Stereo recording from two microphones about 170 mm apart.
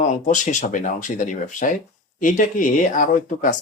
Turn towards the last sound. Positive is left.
turn(degrees=50)  # may be behind; listen again after turning